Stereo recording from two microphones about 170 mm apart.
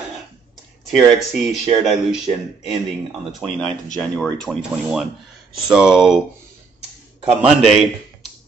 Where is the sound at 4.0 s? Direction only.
5° left (ahead or behind).